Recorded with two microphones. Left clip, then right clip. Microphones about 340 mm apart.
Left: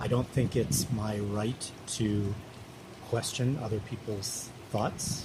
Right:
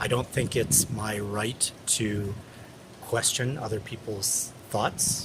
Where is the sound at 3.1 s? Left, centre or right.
Right.